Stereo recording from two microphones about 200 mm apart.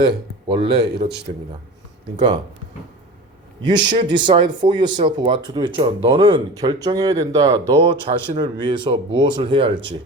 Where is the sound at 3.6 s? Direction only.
20° right (ahead or behind).